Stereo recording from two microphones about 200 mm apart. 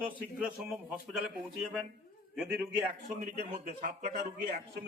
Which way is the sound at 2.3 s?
5° right (ahead or behind).